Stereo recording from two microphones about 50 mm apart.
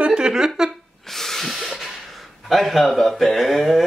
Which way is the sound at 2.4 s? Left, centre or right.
Centre.